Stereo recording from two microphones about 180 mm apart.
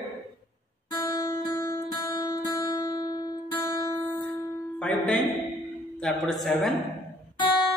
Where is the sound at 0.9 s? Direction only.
20° left (ahead or behind); by 5.2 s 5° left (ahead or behind).